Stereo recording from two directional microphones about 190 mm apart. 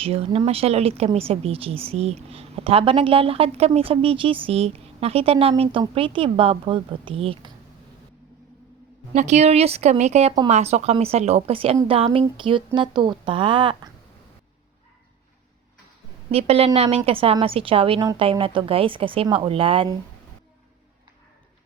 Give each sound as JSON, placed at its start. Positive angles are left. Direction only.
{"t": 0.0, "sound": "a woman's voice", "side_deg": -30}
{"t": 9.1, "sound": "a woman's voice", "side_deg": -35}
{"t": 16.3, "sound": "a woman's voice", "side_deg": -30}